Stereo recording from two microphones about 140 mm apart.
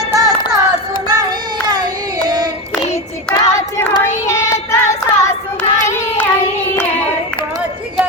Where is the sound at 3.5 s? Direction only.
20° left (ahead or behind).